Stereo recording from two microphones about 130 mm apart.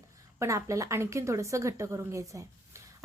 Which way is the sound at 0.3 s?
25° right (ahead or behind).